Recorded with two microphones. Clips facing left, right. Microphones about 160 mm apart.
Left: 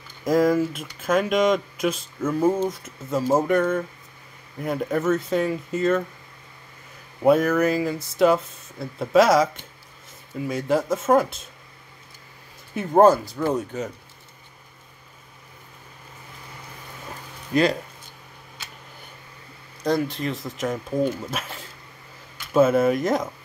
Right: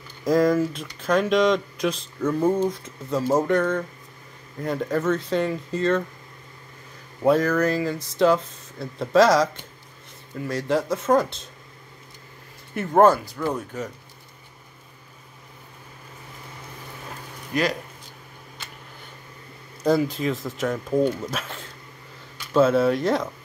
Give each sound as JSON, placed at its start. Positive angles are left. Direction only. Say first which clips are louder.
{"t": 0.3, "sound": "speech", "louder": "even", "side_deg": 5}
{"t": 7.2, "sound": "speech", "louder": "left 1 dB", "side_deg": 10}
{"t": 12.7, "sound": "speech", "louder": "left 1 dB", "side_deg": 20}
{"t": 17.5, "sound": "speech", "louder": "left 4 dB", "side_deg": 30}
{"t": 19.8, "sound": "speech", "louder": "right 2 dB", "side_deg": -5}